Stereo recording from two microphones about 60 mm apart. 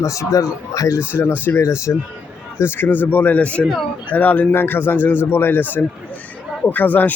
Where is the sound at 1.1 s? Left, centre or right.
Left.